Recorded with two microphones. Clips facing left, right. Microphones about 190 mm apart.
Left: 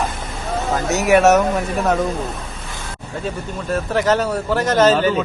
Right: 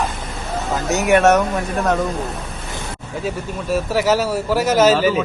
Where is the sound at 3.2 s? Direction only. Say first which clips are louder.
Right 1 dB; 10° right (ahead or behind).